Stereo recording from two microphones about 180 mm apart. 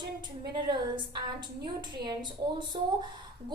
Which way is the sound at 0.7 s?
25° right (ahead or behind).